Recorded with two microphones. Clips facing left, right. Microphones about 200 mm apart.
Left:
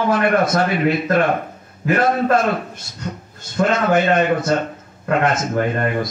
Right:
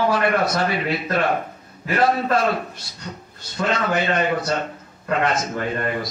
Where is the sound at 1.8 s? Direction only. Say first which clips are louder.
Left 3 dB; 50° left (ahead or behind).